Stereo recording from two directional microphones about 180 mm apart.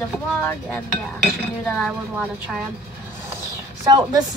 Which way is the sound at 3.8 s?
20° right (ahead or behind).